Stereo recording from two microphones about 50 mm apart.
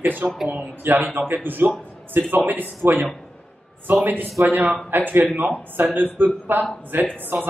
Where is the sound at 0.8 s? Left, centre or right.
Right.